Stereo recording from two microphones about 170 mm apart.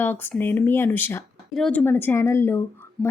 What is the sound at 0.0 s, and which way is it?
Speech, 10° left (ahead or behind).